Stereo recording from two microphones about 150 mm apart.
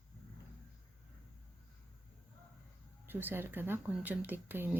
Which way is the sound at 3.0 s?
15° right (ahead or behind).